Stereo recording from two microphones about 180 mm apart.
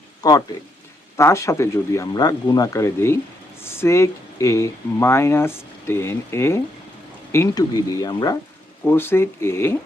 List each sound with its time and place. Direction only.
0.2 s speech: 20° left (ahead or behind)